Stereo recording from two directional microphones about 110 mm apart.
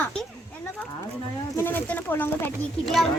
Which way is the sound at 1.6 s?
20° left (ahead or behind).